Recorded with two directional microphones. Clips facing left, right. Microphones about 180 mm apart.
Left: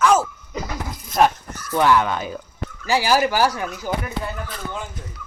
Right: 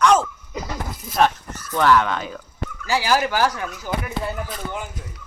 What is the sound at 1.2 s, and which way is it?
Speech, 10° left (ahead or behind).